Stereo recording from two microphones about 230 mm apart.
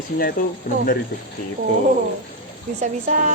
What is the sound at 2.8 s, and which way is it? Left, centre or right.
Speech, right.